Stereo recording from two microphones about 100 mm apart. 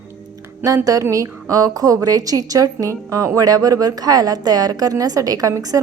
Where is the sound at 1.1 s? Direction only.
35° right (ahead or behind).